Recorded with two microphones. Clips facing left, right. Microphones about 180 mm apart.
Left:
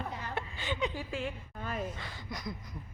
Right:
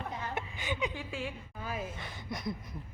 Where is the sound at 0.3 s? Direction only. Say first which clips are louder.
Left 3 dB; 15° right (ahead or behind).